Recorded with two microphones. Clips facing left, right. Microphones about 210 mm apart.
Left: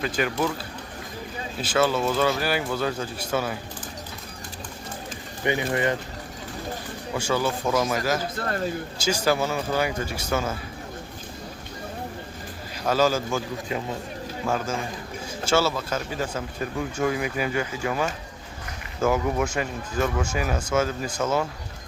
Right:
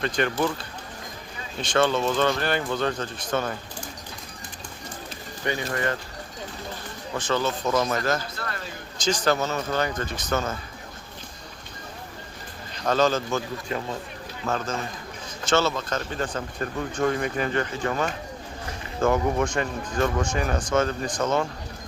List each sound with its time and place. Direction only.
0.0 s speech: 5° left (ahead or behind)
1.6 s speech: 5° left (ahead or behind)
5.4 s speech: 15° left (ahead or behind)
7.2 s speech: 10° left (ahead or behind)
8.4 s speech: 35° left (ahead or behind)
9.0 s speech: 10° left (ahead or behind)
12.7 s speech: 5° left (ahead or behind)